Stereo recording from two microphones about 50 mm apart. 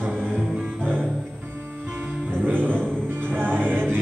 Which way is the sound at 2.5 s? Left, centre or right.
Right.